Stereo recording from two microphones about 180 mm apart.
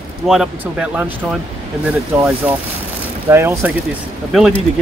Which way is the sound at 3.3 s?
15° right (ahead or behind).